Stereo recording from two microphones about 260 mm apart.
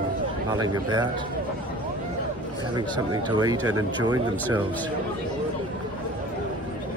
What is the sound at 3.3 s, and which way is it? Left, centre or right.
Speech, centre.